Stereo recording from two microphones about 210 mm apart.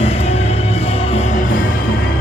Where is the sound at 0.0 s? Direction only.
30° left (ahead or behind).